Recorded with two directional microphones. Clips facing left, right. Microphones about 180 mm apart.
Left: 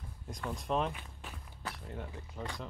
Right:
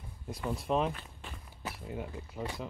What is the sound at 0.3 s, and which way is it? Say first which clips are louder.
Speech: right 3 dB; 5° right (ahead or behind).